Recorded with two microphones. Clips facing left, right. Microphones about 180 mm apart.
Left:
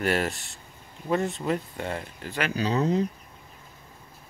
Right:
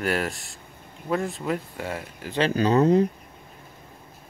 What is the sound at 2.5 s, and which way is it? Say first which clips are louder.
Speech: right 6 dB; 55° right (ahead or behind).